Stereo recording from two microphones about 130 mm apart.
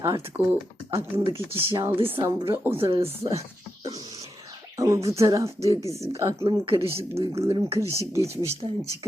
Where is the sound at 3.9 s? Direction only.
30° right (ahead or behind).